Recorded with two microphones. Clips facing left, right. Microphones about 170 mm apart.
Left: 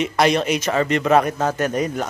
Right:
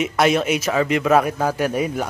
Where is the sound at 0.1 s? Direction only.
5° right (ahead or behind).